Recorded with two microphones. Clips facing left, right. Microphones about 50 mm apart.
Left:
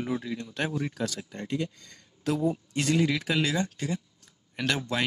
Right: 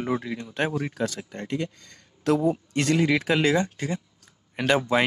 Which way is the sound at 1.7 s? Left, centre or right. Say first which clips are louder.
Right 2 dB; right.